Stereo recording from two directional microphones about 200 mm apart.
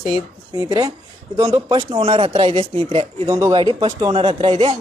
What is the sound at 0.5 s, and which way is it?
Speech, 15° right (ahead or behind).